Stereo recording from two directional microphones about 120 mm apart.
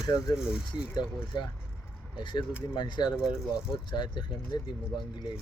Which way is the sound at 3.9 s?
40° left (ahead or behind).